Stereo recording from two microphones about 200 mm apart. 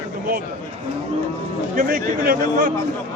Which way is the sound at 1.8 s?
45° right (ahead or behind).